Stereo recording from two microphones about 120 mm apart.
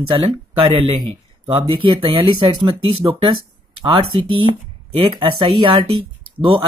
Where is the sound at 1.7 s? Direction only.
45° right (ahead or behind).